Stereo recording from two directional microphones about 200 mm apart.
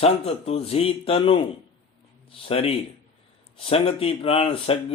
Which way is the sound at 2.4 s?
30° left (ahead or behind).